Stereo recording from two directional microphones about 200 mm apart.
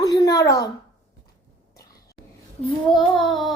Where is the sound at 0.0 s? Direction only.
20° left (ahead or behind).